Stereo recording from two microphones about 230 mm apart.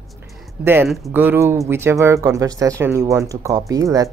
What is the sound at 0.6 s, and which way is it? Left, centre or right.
Speech, centre.